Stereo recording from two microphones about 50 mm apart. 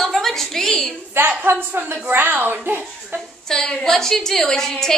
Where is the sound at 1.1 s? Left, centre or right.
Right.